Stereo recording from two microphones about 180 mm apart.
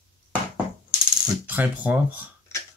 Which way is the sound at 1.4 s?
10° right (ahead or behind).